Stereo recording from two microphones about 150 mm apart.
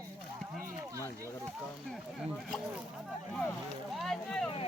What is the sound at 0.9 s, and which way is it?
Speech, 20° right (ahead or behind).